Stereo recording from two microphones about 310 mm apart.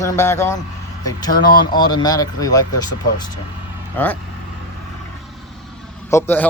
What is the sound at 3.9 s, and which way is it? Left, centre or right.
Speech, centre.